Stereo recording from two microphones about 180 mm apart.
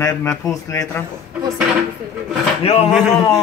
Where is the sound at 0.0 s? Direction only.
15° left (ahead or behind).